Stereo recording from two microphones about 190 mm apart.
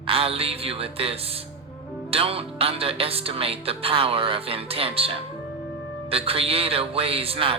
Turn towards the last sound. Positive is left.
turn(degrees=-30)  # may be behind; listen again after turning